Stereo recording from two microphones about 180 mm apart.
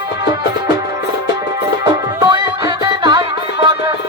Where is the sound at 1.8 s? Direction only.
25° right (ahead or behind).